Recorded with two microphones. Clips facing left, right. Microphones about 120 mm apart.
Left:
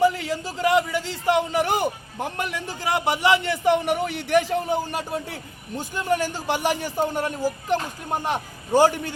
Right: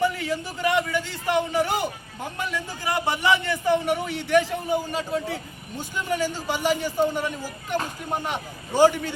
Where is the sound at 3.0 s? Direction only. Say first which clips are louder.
Left 2 dB; 25° left (ahead or behind).